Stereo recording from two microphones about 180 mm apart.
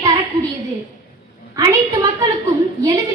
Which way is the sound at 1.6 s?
20° right (ahead or behind).